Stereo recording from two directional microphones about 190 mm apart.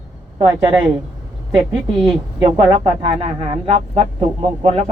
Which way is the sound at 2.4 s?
20° right (ahead or behind).